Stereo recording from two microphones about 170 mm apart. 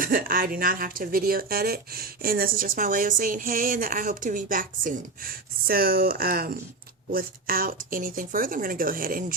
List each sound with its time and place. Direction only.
0.0 s a woman's voice: 55° right (ahead or behind)